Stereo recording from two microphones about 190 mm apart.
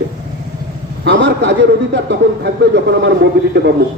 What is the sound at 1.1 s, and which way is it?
A man's voice, 70° right (ahead or behind).